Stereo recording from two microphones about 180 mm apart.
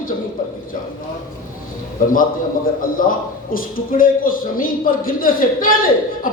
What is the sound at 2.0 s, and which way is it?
A man's voice, 50° left (ahead or behind).